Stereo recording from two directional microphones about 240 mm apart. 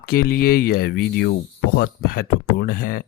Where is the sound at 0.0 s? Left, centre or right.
Left.